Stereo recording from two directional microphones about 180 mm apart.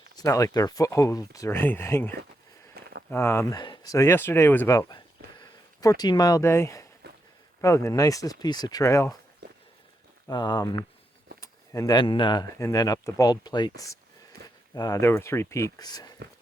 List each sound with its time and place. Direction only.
0.2 s speech: 20° left (ahead or behind)
2.8 s a sound: 60° right (ahead or behind)
3.1 s speech: 15° left (ahead or behind)
7.0 s a sound: 65° right (ahead or behind)
7.6 s speech: 15° left (ahead or behind)
10.2 s speech: 25° left (ahead or behind)